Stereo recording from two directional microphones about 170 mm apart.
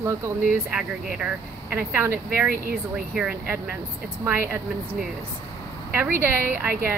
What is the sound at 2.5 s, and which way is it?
Speech, 60° right (ahead or behind).